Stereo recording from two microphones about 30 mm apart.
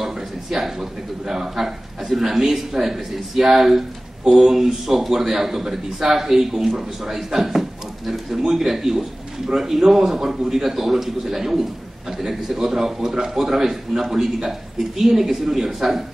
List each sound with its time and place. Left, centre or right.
0.0 s a man's voice: centre
10.1 s a man's voice: right
10.5 s a man's voice: centre